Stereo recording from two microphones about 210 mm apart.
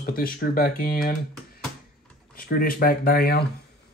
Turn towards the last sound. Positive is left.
turn(degrees=45)  # may be behind; listen again after turning